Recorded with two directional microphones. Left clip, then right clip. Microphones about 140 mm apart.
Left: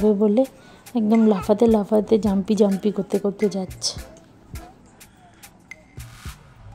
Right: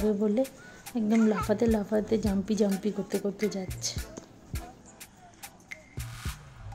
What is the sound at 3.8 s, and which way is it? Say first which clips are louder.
Speech: left 9 dB; 30° left (ahead or behind).